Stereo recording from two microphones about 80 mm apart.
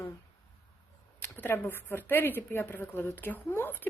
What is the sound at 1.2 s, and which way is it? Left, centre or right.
A woman's voice, left.